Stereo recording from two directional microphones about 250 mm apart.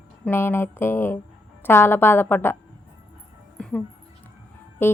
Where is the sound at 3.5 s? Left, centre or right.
Centre.